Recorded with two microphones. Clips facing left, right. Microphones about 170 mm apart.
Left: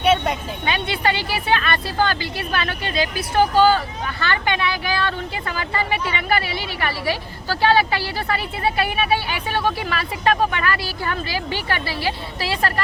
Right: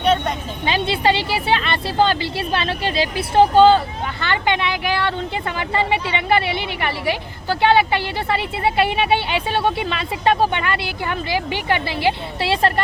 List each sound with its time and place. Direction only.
0.0 s music: 5° left (ahead or behind)
0.6 s speech: 25° right (ahead or behind)